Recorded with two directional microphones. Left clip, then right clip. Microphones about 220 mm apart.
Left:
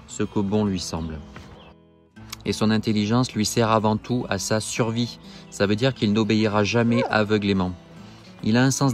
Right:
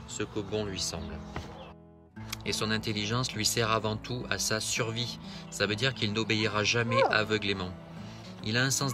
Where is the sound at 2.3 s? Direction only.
15° left (ahead or behind).